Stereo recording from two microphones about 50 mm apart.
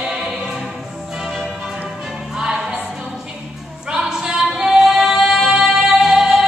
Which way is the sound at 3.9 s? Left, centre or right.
Centre.